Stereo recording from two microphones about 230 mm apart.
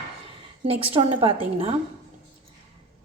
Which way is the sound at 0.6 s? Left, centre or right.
Right.